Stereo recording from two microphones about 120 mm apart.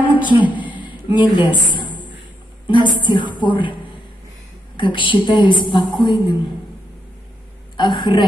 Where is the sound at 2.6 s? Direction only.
40° left (ahead or behind).